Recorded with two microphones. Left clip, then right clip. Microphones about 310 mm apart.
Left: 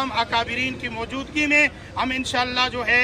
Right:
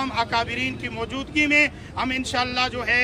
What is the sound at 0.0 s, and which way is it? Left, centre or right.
A man's voice, centre.